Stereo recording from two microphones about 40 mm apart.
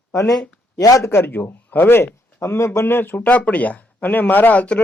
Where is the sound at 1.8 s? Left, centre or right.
Left.